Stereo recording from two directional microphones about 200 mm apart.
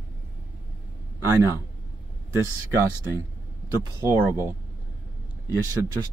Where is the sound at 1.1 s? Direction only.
15° right (ahead or behind).